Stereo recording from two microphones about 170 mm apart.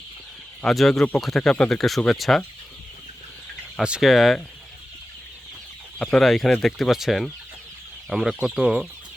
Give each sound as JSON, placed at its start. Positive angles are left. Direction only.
{"t": 0.6, "sound": "speech", "side_deg": 0}
{"t": 3.8, "sound": "speech", "side_deg": -5}
{"t": 6.0, "sound": "speech", "side_deg": 5}